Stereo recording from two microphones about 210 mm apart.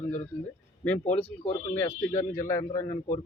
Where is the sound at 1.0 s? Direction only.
35° left (ahead or behind).